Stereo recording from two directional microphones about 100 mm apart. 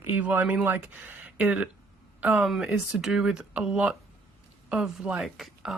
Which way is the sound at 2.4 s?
Centre (ahead or behind).